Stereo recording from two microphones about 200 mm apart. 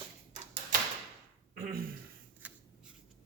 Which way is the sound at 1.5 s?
45° right (ahead or behind).